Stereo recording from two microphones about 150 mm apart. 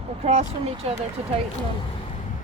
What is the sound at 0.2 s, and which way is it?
Speech, 45° right (ahead or behind).